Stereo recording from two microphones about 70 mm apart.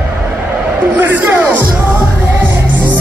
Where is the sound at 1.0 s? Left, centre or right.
Right.